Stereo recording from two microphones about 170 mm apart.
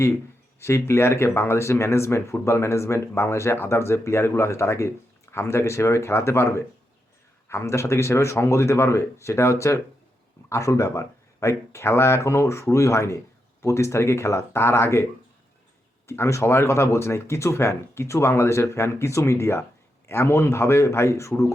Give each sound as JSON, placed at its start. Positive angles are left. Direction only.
{"t": 0.6, "sound": "speech", "side_deg": 15}
{"t": 16.0, "sound": "speech", "side_deg": 15}